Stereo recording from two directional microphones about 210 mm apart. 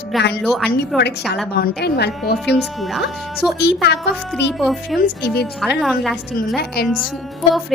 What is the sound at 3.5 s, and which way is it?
Speech, 55° left (ahead or behind).